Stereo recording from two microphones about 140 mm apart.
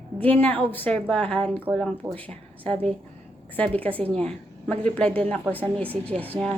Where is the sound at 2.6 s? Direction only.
40° right (ahead or behind).